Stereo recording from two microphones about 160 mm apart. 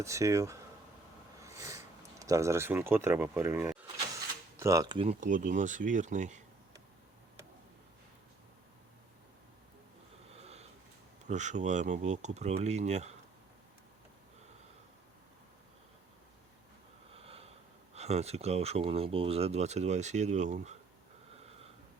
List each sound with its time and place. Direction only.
0.0 s speech: 20° right (ahead or behind)
4.5 s mechanisms: 20° right (ahead or behind)
4.9 s speech: 35° right (ahead or behind)
5.2 s speech: 50° right (ahead or behind)
10.3 s sniff: 40° right (ahead or behind)
11.3 s speech: 50° right (ahead or behind)
17.1 s a sound: 40° right (ahead or behind)
17.9 s speech: 40° right (ahead or behind)